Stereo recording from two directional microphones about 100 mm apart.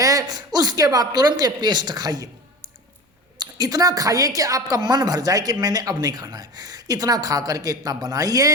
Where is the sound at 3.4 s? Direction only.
40° right (ahead or behind).